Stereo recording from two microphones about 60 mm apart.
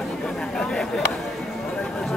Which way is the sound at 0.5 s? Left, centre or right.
Centre.